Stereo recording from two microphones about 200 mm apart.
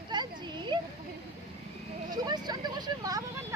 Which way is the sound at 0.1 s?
20° right (ahead or behind).